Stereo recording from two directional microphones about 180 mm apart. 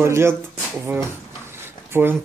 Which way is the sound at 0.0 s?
15° right (ahead or behind).